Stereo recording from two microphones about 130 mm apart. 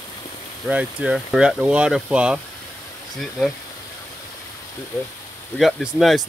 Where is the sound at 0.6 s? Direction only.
5° right (ahead or behind).